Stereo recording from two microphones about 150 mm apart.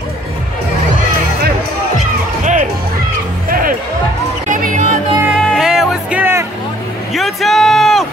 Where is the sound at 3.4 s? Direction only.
70° right (ahead or behind).